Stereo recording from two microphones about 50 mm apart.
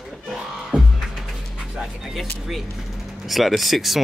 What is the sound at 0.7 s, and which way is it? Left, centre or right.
Music, right.